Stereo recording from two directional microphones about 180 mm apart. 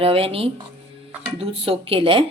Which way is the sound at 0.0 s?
30° right (ahead or behind).